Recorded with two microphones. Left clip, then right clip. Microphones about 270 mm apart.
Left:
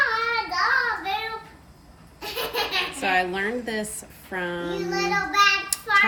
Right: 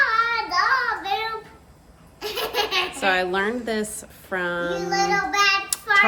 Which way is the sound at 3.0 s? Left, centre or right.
Centre.